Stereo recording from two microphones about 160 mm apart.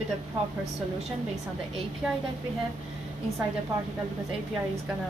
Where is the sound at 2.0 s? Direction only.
5° right (ahead or behind).